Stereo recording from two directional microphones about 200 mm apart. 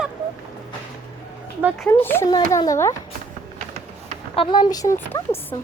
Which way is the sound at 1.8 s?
10° left (ahead or behind).